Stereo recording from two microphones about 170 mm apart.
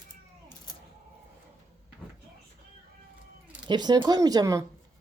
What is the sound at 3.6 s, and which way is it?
Speech, 25° right (ahead or behind).